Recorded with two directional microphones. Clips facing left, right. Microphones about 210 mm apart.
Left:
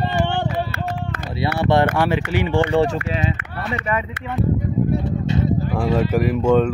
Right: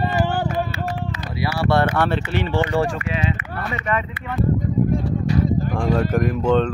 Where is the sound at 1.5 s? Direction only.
20° left (ahead or behind).